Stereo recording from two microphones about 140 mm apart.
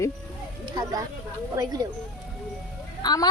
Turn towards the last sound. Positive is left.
turn(degrees=30)  # may be behind; listen again after turning